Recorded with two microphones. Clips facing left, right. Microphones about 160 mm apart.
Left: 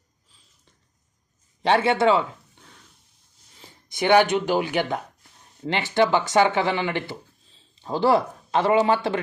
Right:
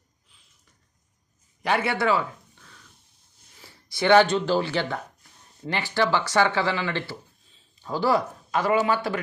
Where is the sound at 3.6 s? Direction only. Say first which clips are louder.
Left 1 dB; 20° left (ahead or behind).